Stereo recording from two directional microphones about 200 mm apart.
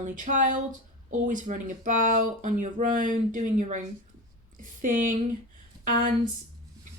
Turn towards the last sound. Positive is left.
turn(degrees=-40)  # may be behind; listen again after turning